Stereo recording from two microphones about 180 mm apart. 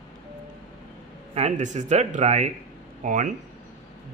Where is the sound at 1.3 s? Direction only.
40° right (ahead or behind).